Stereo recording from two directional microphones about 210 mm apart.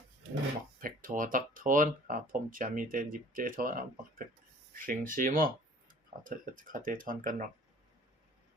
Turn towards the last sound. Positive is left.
turn(degrees=-40)  # may be behind; listen again after turning